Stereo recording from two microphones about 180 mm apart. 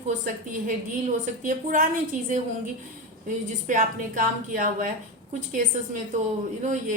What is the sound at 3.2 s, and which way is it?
A woman's voice, 50° right (ahead or behind).